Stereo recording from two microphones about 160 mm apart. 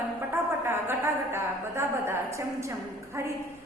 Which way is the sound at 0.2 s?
15° right (ahead or behind).